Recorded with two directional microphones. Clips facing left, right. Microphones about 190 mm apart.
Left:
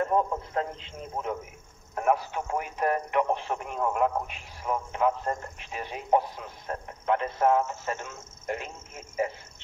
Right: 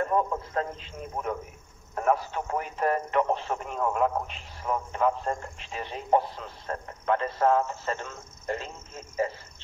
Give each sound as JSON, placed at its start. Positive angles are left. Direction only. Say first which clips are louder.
{"t": 0.1, "sound": "a man's voice", "louder": "even", "side_deg": 20}